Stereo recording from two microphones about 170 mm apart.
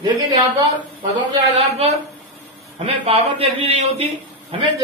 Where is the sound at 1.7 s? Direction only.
35° right (ahead or behind).